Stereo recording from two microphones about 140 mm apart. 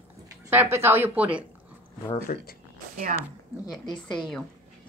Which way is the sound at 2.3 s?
75° left (ahead or behind).